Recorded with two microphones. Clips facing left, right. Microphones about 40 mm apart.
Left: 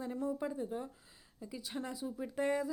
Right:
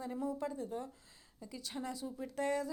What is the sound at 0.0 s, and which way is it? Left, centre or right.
Speech, centre.